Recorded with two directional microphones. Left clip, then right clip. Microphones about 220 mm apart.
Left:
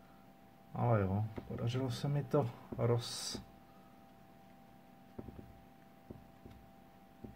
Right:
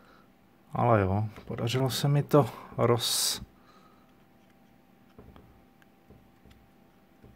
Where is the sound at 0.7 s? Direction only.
45° right (ahead or behind).